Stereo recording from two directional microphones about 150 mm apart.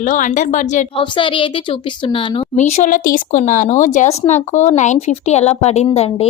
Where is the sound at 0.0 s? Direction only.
60° left (ahead or behind).